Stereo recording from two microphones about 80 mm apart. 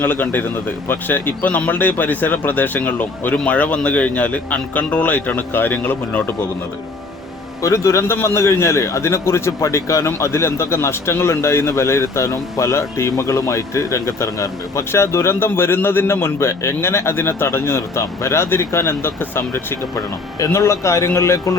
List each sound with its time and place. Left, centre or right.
0.0 s speech: left
7.6 s a man's voice: left